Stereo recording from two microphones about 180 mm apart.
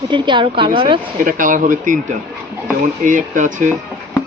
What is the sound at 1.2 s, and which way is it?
Speech, 50° right (ahead or behind).